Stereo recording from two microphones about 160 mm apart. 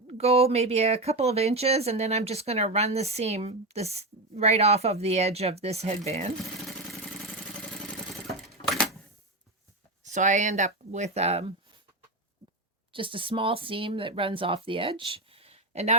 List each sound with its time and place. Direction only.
0.1 s speech: 40° right (ahead or behind)
8.7 s camera: centre (ahead or behind)
10.0 s speech: 50° right (ahead or behind)
12.9 s speech: 30° right (ahead or behind)